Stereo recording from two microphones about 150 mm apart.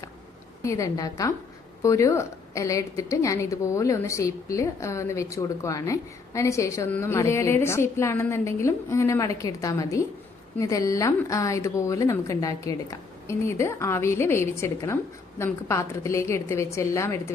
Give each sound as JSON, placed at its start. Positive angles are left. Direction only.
{"t": 0.6, "sound": "a woman's voice", "side_deg": 20}